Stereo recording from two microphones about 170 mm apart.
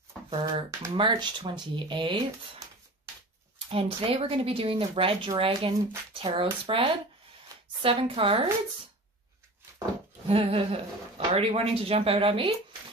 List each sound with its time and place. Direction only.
0.9 s speech: 30° right (ahead or behind)
3.7 s speech: 35° right (ahead or behind)
7.5 s a sound: 20° right (ahead or behind)
7.8 s speech: 30° right (ahead or behind)
10.2 s speech: 35° right (ahead or behind)